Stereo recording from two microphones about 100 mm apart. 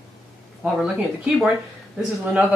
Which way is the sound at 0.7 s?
5° right (ahead or behind).